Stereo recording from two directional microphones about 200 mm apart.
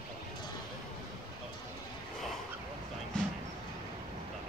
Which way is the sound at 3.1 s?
5° left (ahead or behind).